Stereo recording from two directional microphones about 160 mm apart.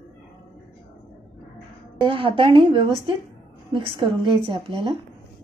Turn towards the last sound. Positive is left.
turn(degrees=-35)  # may be behind; listen again after turning